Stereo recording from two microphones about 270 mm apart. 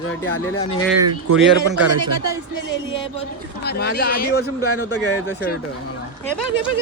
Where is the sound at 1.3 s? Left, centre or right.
Right.